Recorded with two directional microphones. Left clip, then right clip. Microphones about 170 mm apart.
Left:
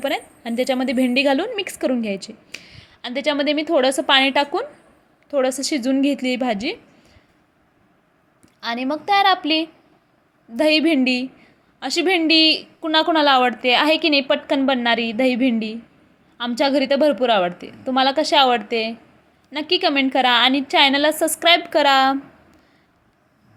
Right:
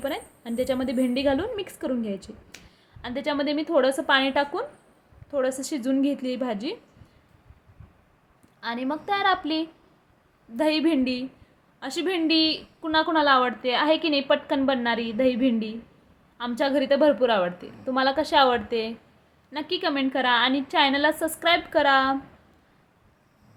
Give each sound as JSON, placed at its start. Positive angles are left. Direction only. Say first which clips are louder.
{"t": 0.0, "sound": "a woman's voice", "louder": "left 7 dB", "side_deg": 15}
{"t": 8.6, "sound": "a woman's voice", "louder": "left 6 dB", "side_deg": 15}